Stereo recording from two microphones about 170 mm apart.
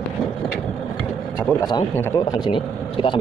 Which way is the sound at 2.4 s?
30° left (ahead or behind).